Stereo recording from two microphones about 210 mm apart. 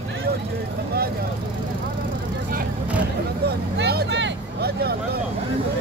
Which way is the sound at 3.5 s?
50° right (ahead or behind).